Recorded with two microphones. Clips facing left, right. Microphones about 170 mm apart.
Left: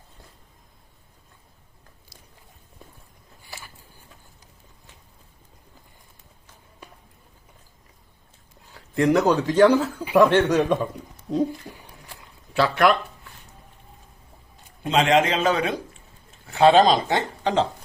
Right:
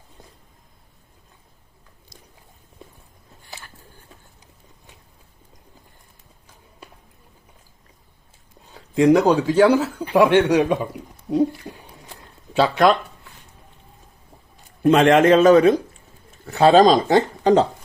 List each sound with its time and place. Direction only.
8.7 s speech: 15° right (ahead or behind)
14.8 s speech: 55° right (ahead or behind)